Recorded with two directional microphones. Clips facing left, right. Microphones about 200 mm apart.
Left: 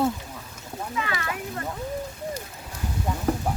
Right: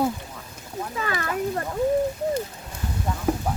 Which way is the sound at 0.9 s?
40° right (ahead or behind).